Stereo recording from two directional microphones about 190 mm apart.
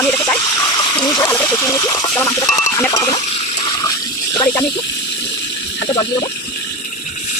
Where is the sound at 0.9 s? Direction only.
20° left (ahead or behind).